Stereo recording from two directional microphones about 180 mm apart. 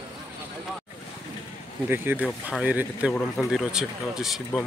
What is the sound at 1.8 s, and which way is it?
Speech, 10° right (ahead or behind).